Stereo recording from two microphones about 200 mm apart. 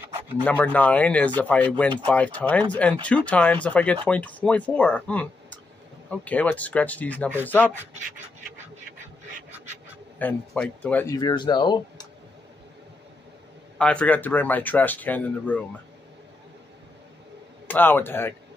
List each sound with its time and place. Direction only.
0.4 s speech: 10° left (ahead or behind)
10.1 s speech: 5° left (ahead or behind)
11.1 s speech: 20° left (ahead or behind)
13.7 s speech: 5° left (ahead or behind)
17.6 s speech: 10° left (ahead or behind)